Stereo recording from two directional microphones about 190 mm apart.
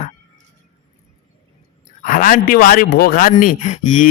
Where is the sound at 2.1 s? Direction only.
45° left (ahead or behind).